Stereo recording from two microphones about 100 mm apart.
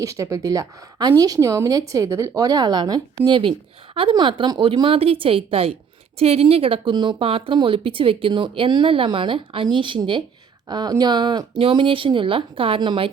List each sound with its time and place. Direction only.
0.0 s a woman's voice: 30° right (ahead or behind); by 5.7 s 75° right (ahead or behind)
6.1 s speech: 90° right
6.9 s speech: 45° right (ahead or behind)
7.2 s speech: 65° right (ahead or behind)
10.7 s speech: 45° right (ahead or behind); by 13.1 s 60° right (ahead or behind)